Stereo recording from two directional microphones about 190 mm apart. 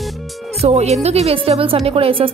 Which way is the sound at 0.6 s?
35° right (ahead or behind).